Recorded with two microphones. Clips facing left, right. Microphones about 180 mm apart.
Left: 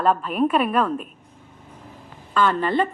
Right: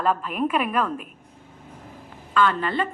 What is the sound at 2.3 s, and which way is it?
Speech, 40° left (ahead or behind).